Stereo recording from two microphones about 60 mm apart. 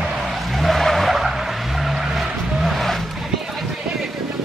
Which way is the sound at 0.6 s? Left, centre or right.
Centre.